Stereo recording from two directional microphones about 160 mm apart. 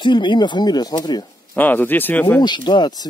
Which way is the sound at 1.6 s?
10° left (ahead or behind).